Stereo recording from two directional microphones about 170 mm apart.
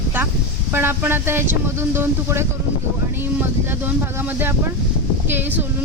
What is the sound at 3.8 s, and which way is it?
Speech, 10° right (ahead or behind).